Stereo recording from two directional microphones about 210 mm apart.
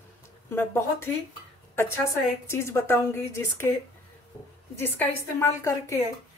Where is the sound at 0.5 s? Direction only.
10° left (ahead or behind).